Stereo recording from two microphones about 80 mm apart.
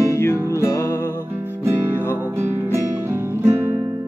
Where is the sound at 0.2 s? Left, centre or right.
Left.